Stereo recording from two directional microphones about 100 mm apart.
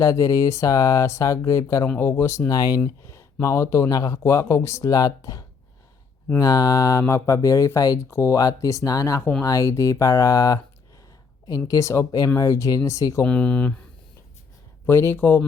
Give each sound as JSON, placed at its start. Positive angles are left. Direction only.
{"t": 0.0, "sound": "speech", "side_deg": 30}
{"t": 2.5, "sound": "speech", "side_deg": 40}
{"t": 13.2, "sound": "speech", "side_deg": 15}
{"t": 14.8, "sound": "speech", "side_deg": 25}